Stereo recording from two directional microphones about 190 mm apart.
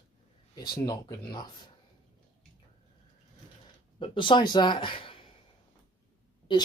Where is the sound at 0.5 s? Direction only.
20° left (ahead or behind).